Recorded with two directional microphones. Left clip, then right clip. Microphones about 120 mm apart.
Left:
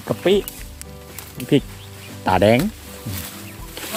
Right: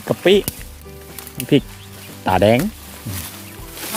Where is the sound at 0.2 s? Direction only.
35° right (ahead or behind).